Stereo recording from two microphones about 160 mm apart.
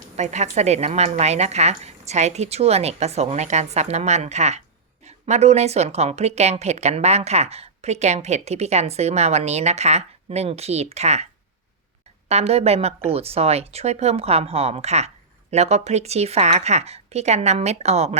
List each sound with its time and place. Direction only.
0.2 s a woman's voice: 45° right (ahead or behind)
12.3 s a woman's voice: 40° right (ahead or behind)